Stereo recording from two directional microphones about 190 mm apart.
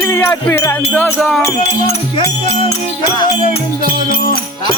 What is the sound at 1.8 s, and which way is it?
Speech, 30° left (ahead or behind).